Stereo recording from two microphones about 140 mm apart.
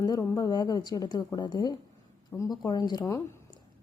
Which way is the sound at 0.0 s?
25° left (ahead or behind).